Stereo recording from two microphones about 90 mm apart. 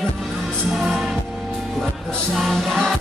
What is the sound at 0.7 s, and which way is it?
Music, centre (ahead or behind).